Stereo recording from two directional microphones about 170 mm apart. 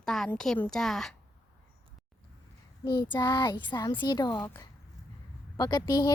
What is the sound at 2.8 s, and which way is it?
Speech, 25° left (ahead or behind).